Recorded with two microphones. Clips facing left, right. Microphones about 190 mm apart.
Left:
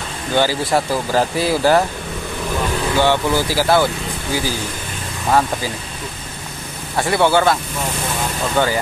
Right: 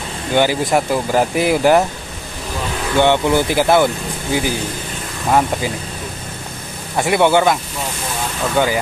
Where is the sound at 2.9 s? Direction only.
20° right (ahead or behind).